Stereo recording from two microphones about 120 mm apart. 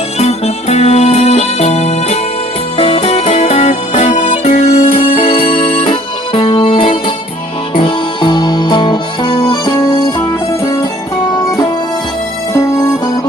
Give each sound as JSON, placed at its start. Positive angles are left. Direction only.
{"t": 0.2, "sound": "music", "side_deg": 60}
{"t": 12.5, "sound": "music", "side_deg": 30}